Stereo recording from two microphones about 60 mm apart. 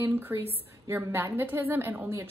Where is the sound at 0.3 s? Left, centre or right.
Right.